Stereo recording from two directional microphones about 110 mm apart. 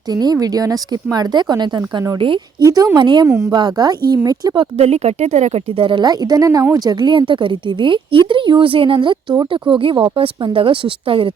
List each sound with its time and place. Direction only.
0.1 s a woman's voice: 35° right (ahead or behind)
2.6 s a woman's voice: 35° right (ahead or behind)
3.2 s a woman's voice: 25° right (ahead or behind)
3.5 s a woman's voice: 40° right (ahead or behind)
4.8 s speech: 70° right (ahead or behind)
5.7 s a woman's voice: 50° right (ahead or behind)